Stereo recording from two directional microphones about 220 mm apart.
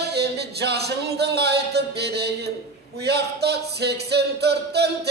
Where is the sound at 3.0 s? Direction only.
50° right (ahead or behind).